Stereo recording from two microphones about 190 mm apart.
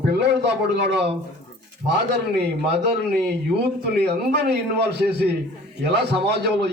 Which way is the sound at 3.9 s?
60° right (ahead or behind).